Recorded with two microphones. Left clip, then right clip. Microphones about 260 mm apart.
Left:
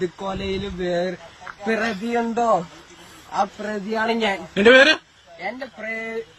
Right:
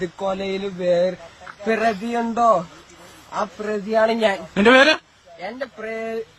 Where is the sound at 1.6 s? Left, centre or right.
Centre.